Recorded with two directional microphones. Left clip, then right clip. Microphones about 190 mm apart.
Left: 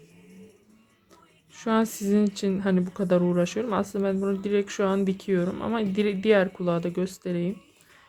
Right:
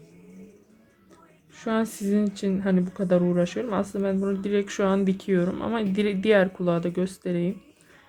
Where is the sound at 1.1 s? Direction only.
20° left (ahead or behind).